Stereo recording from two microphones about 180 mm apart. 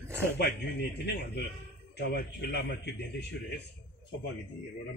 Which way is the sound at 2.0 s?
65° left (ahead or behind).